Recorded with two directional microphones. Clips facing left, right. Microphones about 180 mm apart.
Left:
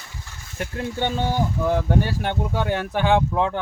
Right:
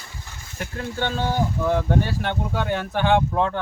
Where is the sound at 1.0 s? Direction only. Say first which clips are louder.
Even; 15° left (ahead or behind).